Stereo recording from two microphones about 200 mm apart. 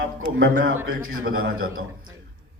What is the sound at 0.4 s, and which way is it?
Speech, 45° right (ahead or behind).